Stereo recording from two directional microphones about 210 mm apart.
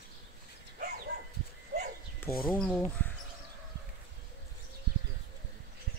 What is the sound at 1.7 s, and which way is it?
Dog, 45° right (ahead or behind).